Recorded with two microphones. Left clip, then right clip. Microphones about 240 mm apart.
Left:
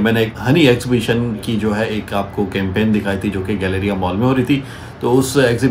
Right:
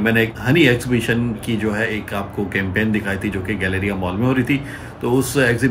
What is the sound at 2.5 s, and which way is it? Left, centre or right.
Speech, centre.